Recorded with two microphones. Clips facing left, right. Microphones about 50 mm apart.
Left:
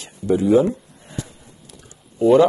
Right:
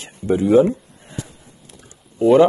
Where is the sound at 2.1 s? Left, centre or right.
Centre.